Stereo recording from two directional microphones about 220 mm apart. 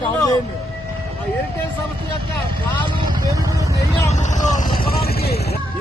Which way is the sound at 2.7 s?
20° right (ahead or behind).